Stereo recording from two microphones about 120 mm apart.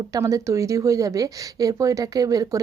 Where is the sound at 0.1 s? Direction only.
30° right (ahead or behind).